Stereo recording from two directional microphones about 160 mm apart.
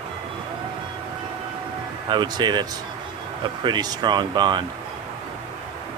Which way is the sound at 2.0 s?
30° right (ahead or behind).